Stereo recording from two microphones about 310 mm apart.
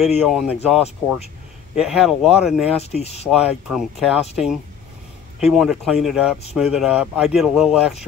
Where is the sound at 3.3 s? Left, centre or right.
Centre.